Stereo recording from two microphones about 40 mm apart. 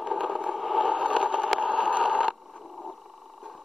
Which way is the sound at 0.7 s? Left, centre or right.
Centre.